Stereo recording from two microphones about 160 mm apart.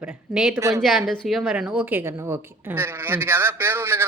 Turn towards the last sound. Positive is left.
turn(degrees=-15)  # may be behind; listen again after turning